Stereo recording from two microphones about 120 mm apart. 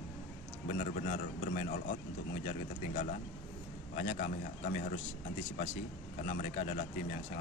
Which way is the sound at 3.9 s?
90° left.